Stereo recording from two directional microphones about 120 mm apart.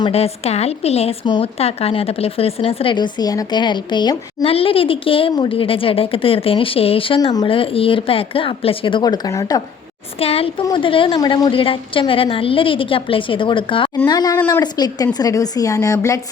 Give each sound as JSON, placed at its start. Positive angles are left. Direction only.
{"t": 0.1, "sound": "a woman's voice", "side_deg": 60}
{"t": 1.2, "sound": "speech", "side_deg": 40}
{"t": 1.5, "sound": "a woman's voice", "side_deg": 55}
{"t": 4.4, "sound": "a woman's voice", "side_deg": 50}
{"t": 10.2, "sound": "a woman's voice", "side_deg": 55}
{"t": 14.1, "sound": "speech", "side_deg": 35}
{"t": 14.3, "sound": "a woman's voice", "side_deg": 20}
{"t": 14.6, "sound": "a woman's voice", "side_deg": 35}